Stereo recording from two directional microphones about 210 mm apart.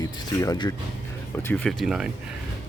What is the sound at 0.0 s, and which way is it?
Speech, 15° left (ahead or behind).